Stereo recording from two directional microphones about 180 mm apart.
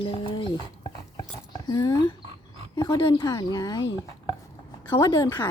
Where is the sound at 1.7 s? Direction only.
20° left (ahead or behind).